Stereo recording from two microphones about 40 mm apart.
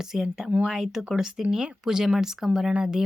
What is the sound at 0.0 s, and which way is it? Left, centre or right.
Speech, centre.